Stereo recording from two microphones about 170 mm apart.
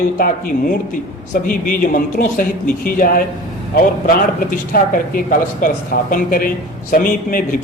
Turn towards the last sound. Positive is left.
turn(degrees=55)  # may be behind; listen again after turning